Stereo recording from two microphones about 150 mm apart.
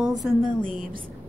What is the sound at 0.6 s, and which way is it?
Speech, 65° right (ahead or behind).